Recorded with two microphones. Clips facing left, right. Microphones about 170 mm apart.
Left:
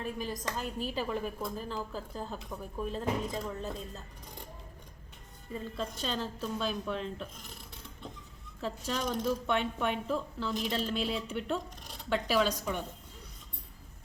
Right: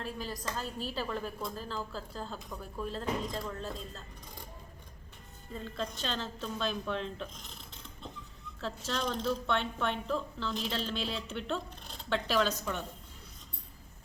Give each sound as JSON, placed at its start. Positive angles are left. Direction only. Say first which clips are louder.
{"t": 0.0, "sound": "speech", "louder": "left 2 dB", "side_deg": 15}
{"t": 5.5, "sound": "speech", "louder": "left 1 dB", "side_deg": 10}
{"t": 8.6, "sound": "speech", "louder": "left 1 dB", "side_deg": 10}